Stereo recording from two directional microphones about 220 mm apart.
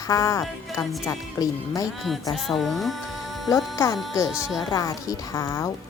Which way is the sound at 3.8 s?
15° left (ahead or behind).